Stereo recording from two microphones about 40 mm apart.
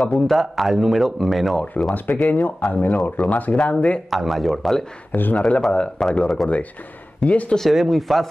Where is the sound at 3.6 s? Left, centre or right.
Left.